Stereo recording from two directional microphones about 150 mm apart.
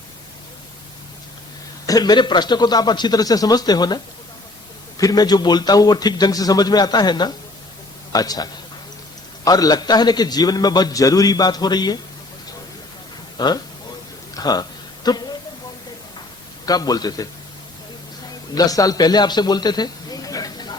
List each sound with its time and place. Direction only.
1.9 s a man's voice: 25° left (ahead or behind)
13.3 s speech: 30° left (ahead or behind)
14.3 s a sound: 25° left (ahead or behind)
16.6 s a man's voice: 25° left (ahead or behind)
18.5 s a man's voice: 25° left (ahead or behind)